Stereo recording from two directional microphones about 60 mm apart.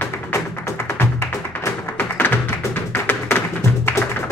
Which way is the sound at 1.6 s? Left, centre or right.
Left.